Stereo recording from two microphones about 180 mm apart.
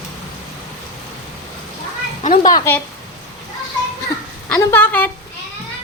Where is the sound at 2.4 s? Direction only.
20° left (ahead or behind).